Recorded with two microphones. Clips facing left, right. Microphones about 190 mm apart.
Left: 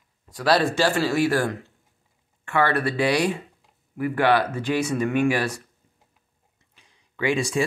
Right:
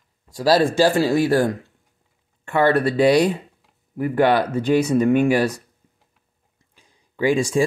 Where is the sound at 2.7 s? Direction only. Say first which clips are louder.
Right 7 dB; 40° right (ahead or behind).